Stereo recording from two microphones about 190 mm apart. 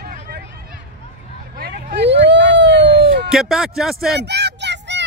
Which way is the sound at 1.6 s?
50° right (ahead or behind).